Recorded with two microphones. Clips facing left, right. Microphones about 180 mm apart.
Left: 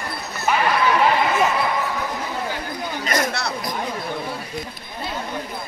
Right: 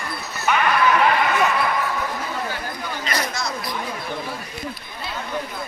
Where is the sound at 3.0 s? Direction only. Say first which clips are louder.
Left 4 dB; 50° left (ahead or behind).